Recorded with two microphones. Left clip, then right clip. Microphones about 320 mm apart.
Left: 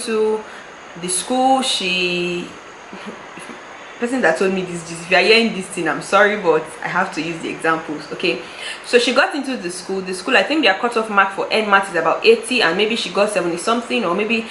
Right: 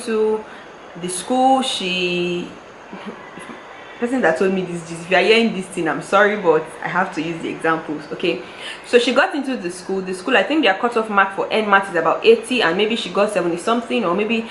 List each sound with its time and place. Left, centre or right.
1.3 s a sound: right
1.5 s speech: centre
4.0 s speech: centre